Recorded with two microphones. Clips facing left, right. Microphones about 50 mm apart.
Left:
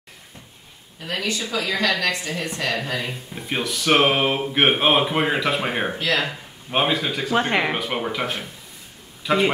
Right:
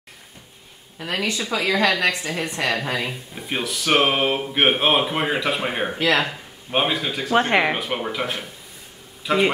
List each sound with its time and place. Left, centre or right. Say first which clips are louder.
0.9 s a woman's voice: right 1 dB; right
3.1 s speech: even; centre
7.3 s speech: right 3 dB; centre